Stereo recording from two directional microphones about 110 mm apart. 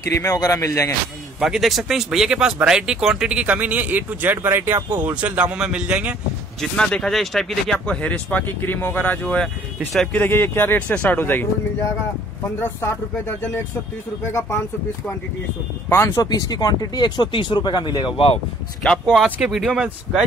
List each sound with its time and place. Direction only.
0.1 s speech: 30° left (ahead or behind)
1.4 s speech: centre (ahead or behind)
6.6 s speech: 5° left (ahead or behind)
12.4 s speech: 20° left (ahead or behind)
14.2 s speech: 20° left (ahead or behind)
15.9 s speech: 25° left (ahead or behind)
16.3 s speech: 35° left (ahead or behind); by 18.4 s 55° left (ahead or behind)
19.2 s speech: 10° right (ahead or behind)